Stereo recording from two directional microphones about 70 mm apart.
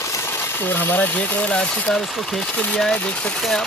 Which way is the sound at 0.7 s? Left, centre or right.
Left.